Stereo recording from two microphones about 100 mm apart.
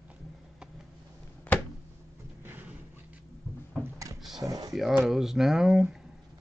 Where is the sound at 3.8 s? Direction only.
35° right (ahead or behind).